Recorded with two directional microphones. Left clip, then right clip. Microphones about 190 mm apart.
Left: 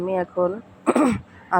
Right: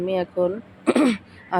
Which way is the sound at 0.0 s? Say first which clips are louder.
Even; centre (ahead or behind).